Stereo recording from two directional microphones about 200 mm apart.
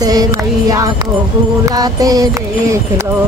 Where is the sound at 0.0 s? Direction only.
20° right (ahead or behind).